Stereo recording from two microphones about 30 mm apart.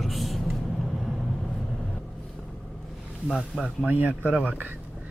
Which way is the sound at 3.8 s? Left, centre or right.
Right.